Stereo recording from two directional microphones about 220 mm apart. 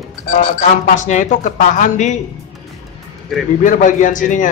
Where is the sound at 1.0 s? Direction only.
35° left (ahead or behind).